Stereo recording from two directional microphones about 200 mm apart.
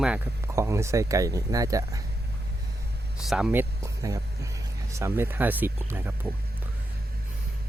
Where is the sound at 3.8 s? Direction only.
15° right (ahead or behind).